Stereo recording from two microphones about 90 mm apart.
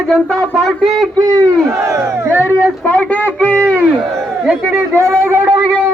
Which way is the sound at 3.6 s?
20° right (ahead or behind).